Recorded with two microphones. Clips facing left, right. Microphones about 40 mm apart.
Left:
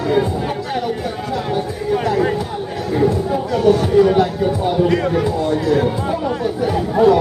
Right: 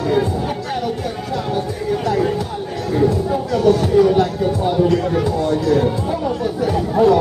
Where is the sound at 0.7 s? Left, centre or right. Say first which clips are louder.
Left 1 dB; centre.